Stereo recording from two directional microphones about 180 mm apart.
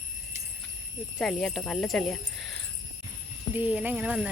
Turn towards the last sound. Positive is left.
turn(degrees=-5)  # may be behind; listen again after turning